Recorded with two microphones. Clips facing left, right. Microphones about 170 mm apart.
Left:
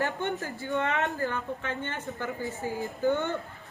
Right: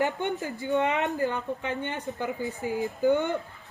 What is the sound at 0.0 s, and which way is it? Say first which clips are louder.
A woman's voice: right 3 dB; 15° right (ahead or behind).